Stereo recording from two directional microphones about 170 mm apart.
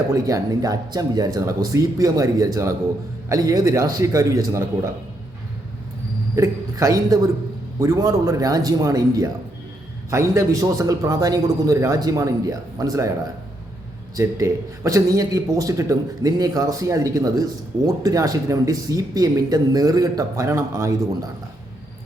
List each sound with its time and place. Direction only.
0.1 s a man's voice: 20° right (ahead or behind)
6.3 s a man's voice: 20° right (ahead or behind)
14.2 s a man's voice: 20° right (ahead or behind)